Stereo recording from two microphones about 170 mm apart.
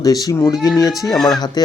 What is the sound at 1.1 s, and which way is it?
Speech, centre (ahead or behind).